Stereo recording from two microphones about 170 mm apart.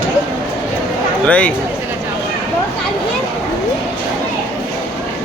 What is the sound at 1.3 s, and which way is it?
Speech, 10° left (ahead or behind).